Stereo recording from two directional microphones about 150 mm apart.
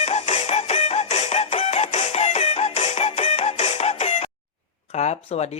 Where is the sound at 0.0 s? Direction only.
50° left (ahead or behind).